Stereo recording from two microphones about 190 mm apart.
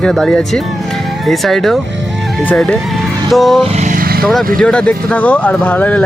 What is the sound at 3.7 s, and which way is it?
Vehicle, 40° right (ahead or behind).